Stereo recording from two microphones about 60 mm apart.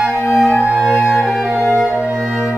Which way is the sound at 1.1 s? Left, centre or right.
Centre.